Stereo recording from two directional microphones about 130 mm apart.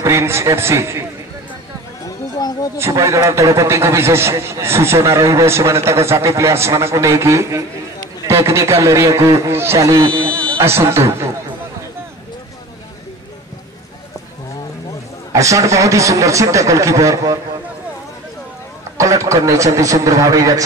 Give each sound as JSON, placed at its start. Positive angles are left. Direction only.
{"t": 0.0, "sound": "a man's voice", "side_deg": -25}
{"t": 2.0, "sound": "a sound", "side_deg": 30}
{"t": 2.8, "sound": "a man's voice", "side_deg": -25}
{"t": 10.0, "sound": "speech", "side_deg": -35}
{"t": 10.3, "sound": "a sound", "side_deg": 10}
{"t": 10.6, "sound": "a man's voice", "side_deg": -20}
{"t": 15.3, "sound": "a man's voice", "side_deg": -25}
{"t": 18.9, "sound": "a man's voice", "side_deg": -25}